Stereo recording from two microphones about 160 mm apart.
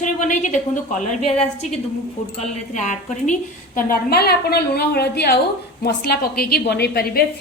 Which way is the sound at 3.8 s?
70° left (ahead or behind).